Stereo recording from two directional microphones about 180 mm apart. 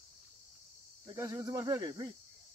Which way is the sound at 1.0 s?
15° right (ahead or behind).